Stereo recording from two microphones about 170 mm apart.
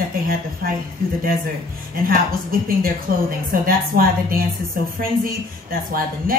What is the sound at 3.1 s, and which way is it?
Speech, 60° right (ahead or behind).